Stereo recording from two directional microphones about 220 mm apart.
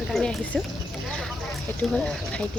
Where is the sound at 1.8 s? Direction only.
Centre (ahead or behind).